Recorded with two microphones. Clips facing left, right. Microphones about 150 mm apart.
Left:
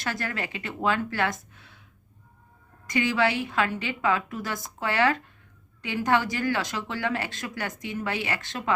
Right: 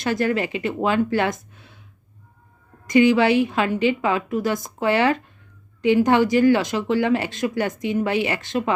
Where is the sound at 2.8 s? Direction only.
15° right (ahead or behind).